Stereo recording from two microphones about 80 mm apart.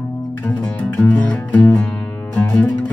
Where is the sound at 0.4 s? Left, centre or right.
Centre.